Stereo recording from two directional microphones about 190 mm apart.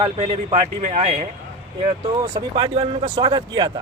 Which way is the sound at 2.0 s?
20° right (ahead or behind).